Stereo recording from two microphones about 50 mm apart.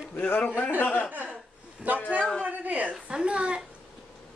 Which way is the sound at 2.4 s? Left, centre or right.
Right.